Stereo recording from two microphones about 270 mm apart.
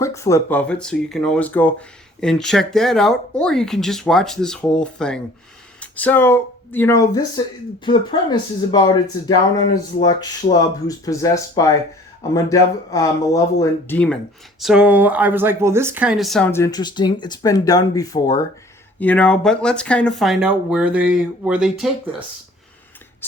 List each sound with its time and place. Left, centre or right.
0.0 s speech: centre